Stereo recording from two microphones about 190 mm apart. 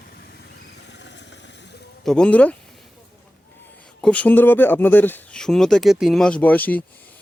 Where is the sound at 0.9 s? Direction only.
65° left (ahead or behind).